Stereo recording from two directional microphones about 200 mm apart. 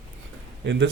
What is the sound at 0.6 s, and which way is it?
Speech, 60° right (ahead or behind).